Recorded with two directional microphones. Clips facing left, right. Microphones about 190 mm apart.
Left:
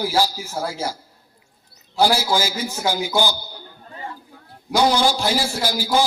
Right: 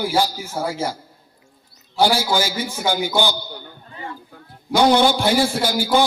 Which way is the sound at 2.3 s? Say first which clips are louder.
Right 1 dB; 55° right (ahead or behind).